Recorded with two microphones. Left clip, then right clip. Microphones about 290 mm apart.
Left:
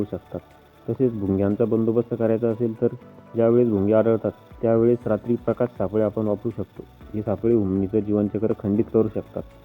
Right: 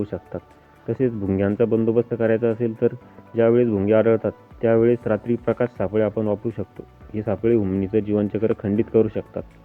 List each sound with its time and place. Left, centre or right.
0.1 s speech: right